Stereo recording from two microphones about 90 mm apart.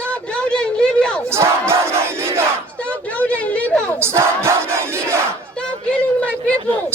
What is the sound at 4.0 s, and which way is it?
Battle cry, 30° right (ahead or behind).